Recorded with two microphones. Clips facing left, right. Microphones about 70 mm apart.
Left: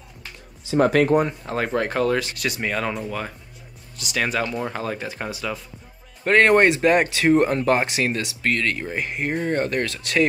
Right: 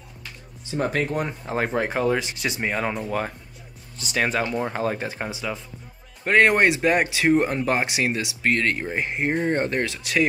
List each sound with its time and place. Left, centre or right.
0.7 s speech: left
1.5 s speech: centre
4.0 s speech: right
6.2 s speech: centre
8.5 s speech: right
9.8 s speech: centre